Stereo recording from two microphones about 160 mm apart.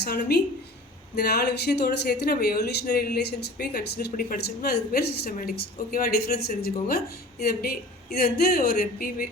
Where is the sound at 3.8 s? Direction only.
70° left (ahead or behind).